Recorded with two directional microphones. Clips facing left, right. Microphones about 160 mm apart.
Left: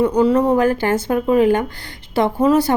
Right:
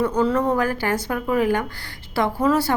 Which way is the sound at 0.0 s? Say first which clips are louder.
Left 5 dB; 15° left (ahead or behind).